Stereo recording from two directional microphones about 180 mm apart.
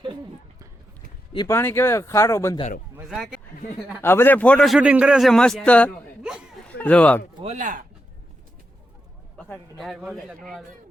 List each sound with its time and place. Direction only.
1.5 s speech: 15° left (ahead or behind)
3.1 s a man's voice: 5° right (ahead or behind)
3.8 s a man's voice: 10° left (ahead or behind)
7.3 s speech: 40° right (ahead or behind)
9.4 s a man's voice: centre (ahead or behind)